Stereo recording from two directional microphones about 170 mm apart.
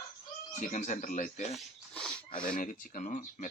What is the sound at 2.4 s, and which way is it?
Speech, 55° left (ahead or behind).